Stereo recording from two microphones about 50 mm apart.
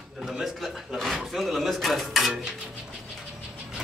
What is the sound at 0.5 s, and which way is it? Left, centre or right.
Speech, centre.